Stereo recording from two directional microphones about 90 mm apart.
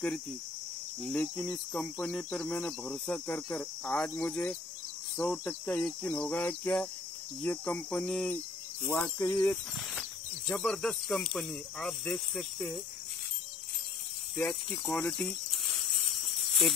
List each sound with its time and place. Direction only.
1.0 s cricket: 15° left (ahead or behind)
6.4 s speech: 20° left (ahead or behind)
7.4 s cricket: 15° left (ahead or behind)
8.8 s speech: 25° left (ahead or behind)
9.9 s cricket: 5° left (ahead or behind)
14.3 s snake: 10° left (ahead or behind)